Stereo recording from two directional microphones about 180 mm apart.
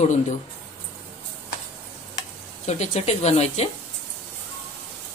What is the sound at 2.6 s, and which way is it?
A woman's voice, 35° left (ahead or behind).